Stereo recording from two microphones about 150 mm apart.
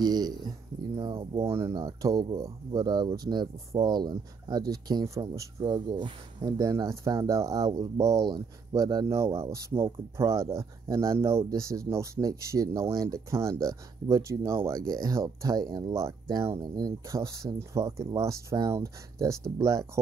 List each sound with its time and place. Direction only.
0.0 s speech: 25° right (ahead or behind)
1.5 s speech: 20° right (ahead or behind)